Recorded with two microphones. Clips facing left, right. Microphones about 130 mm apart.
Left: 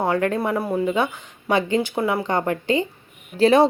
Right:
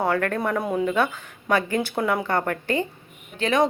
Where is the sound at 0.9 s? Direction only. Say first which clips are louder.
Left 1 dB; 15° left (ahead or behind).